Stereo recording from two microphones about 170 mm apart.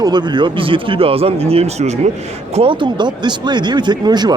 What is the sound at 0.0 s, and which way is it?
Speech, 25° right (ahead or behind).